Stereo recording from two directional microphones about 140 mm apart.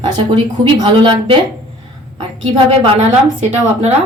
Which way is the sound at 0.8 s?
35° right (ahead or behind).